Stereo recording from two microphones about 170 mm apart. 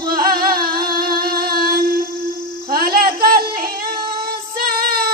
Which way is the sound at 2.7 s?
60° right (ahead or behind).